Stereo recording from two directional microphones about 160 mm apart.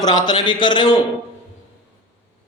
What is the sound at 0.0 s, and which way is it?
Speech, 25° left (ahead or behind).